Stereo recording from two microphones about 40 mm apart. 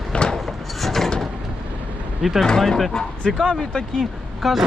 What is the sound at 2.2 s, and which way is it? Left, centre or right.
Speech, centre.